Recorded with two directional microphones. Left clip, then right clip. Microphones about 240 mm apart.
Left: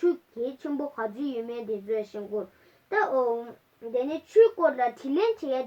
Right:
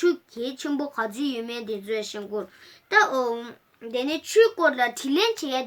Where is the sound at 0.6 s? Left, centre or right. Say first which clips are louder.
Right 3 dB; right.